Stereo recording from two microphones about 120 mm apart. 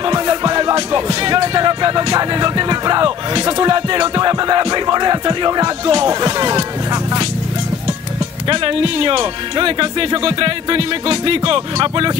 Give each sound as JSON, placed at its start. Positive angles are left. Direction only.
{"t": 0.0, "sound": "music", "side_deg": -35}
{"t": 8.5, "sound": "speech", "side_deg": -45}